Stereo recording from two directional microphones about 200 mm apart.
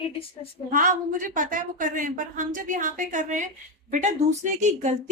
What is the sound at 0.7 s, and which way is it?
A woman's voice, 40° right (ahead or behind).